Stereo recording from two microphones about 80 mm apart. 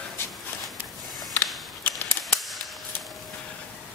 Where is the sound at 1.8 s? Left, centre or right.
Left.